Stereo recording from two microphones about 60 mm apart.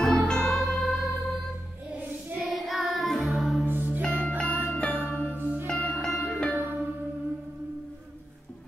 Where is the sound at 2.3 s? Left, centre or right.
Centre.